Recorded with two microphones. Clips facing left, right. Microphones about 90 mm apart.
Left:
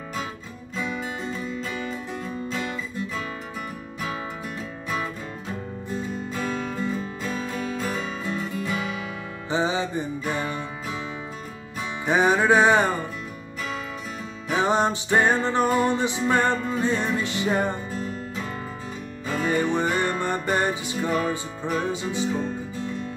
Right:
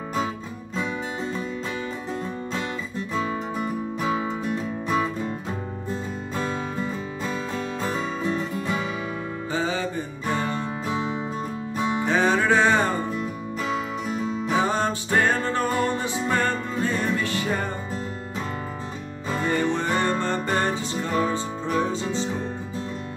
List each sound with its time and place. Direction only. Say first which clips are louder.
9.5 s music: left 3 dB; 20° left (ahead or behind)
12.1 s music: left 3 dB; 15° left (ahead or behind)
14.6 s music: left 6 dB; 20° left (ahead or behind)
19.4 s music: left 1 dB; 15° left (ahead or behind)